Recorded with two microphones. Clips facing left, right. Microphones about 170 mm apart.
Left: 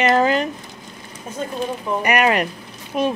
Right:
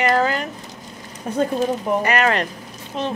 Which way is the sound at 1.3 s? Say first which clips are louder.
Right 8 dB; 65° right (ahead or behind).